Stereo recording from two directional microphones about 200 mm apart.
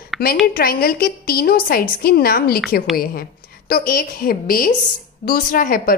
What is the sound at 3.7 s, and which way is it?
A woman's voice, 45° left (ahead or behind).